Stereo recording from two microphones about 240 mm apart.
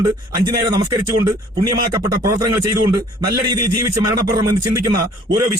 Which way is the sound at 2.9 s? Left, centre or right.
Centre.